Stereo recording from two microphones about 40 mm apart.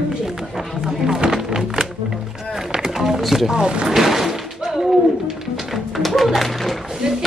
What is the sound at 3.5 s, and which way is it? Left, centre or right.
Speech, right.